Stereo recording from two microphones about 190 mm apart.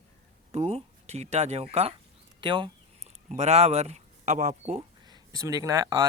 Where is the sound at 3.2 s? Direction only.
35° right (ahead or behind).